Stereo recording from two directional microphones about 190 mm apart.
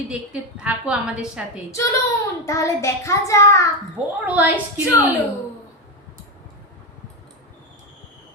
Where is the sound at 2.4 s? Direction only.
15° left (ahead or behind).